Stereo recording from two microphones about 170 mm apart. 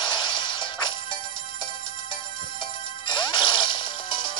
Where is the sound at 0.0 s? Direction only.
30° left (ahead or behind).